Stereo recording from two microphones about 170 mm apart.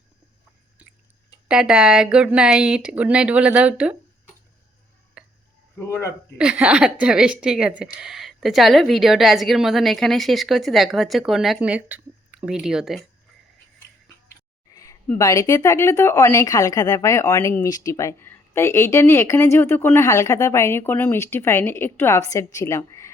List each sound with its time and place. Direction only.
1.5 s speech: 5° right (ahead or behind)
5.2 s a sound: 5° right (ahead or behind)
5.8 s speech: 15° left (ahead or behind)
6.3 s speech: 5° right (ahead or behind)
14.7 s a sound: 20° left (ahead or behind)
15.2 s speech: 20° left (ahead or behind)